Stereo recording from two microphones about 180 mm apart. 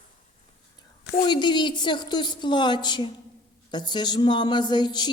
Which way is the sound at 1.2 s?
25° left (ahead or behind).